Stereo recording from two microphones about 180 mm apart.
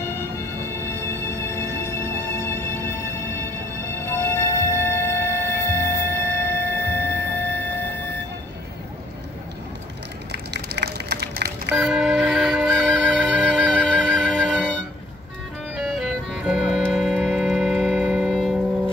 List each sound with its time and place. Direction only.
0.0 s music: 15° left (ahead or behind)
4.0 s music: 15° left (ahead or behind)
10.3 s run: 70° right (ahead or behind)
11.7 s music: centre (ahead or behind)